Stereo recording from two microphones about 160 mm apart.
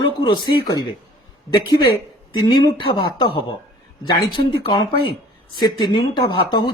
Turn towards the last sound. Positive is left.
turn(degrees=30)  # may be behind; listen again after turning